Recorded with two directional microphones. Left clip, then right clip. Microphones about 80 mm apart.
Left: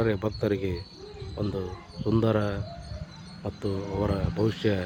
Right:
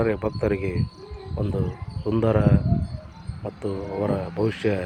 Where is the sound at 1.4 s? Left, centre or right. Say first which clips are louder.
Right 3 dB; centre.